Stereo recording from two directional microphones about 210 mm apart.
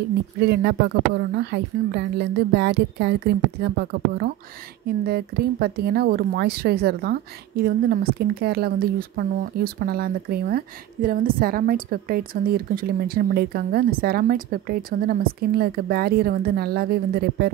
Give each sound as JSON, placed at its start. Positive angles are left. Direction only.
{"t": 0.4, "sound": "speech", "side_deg": -50}